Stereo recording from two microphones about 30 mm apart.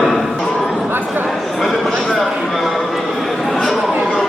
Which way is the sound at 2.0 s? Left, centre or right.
Centre.